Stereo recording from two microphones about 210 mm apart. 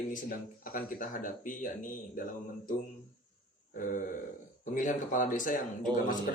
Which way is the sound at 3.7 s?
40° left (ahead or behind).